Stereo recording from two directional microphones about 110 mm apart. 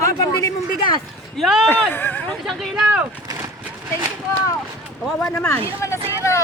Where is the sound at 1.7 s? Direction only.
15° left (ahead or behind).